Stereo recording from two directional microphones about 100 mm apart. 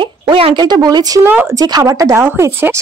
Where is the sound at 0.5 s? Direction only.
45° right (ahead or behind).